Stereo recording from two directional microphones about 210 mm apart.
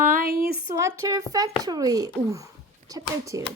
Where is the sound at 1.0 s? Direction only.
15° right (ahead or behind).